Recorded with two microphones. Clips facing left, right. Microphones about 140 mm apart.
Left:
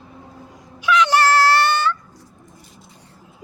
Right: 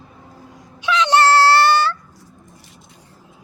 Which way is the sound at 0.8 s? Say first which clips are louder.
Right 1 dB; 25° right (ahead or behind).